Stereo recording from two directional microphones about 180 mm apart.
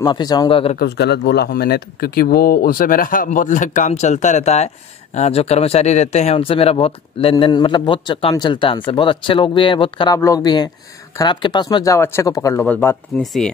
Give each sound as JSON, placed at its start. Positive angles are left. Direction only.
{"t": 0.0, "sound": "speech", "side_deg": 25}
{"t": 0.7, "sound": "speech", "side_deg": 65}
{"t": 13.2, "sound": "chopping", "side_deg": 0}